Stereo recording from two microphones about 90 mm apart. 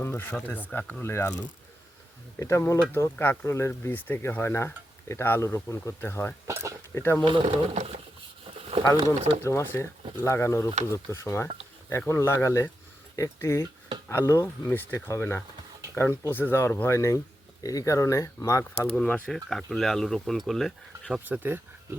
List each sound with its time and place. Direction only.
0.0 s a sound: 25° left (ahead or behind)
0.3 s speech: 20° left (ahead or behind)
1.0 s speech: 30° left (ahead or behind)
2.4 s speech: 30° left (ahead or behind)
6.5 s a sound: 30° right (ahead or behind)
6.9 s speech: 30° left (ahead or behind)
7.3 s speech: 90° right
8.7 s a sound: 90° right
9.4 s speech: 30° left (ahead or behind)
18.9 s speech: 15° left (ahead or behind)
19.3 s speech: 5° left (ahead or behind)
21.2 s speech: 20° right (ahead or behind)